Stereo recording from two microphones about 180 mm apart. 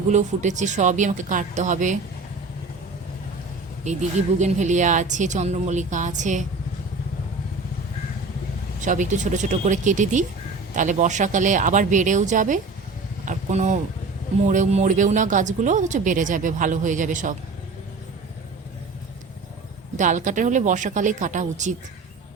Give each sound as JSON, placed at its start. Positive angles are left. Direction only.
{"t": 0.1, "sound": "speech", "side_deg": -40}
{"t": 3.9, "sound": "speech", "side_deg": -40}
{"t": 8.8, "sound": "speech", "side_deg": -45}
{"t": 13.2, "sound": "a sound", "side_deg": -40}
{"t": 14.4, "sound": "speech", "side_deg": -40}
{"t": 20.0, "sound": "speech", "side_deg": -45}